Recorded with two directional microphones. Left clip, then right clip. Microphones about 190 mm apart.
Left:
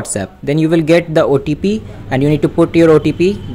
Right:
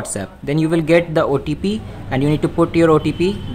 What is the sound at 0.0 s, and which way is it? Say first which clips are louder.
Speech: left 5 dB; 15° left (ahead or behind).